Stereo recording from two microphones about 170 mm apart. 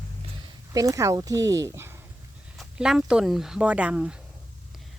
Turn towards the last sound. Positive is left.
turn(degrees=-5)  # may be behind; listen again after turning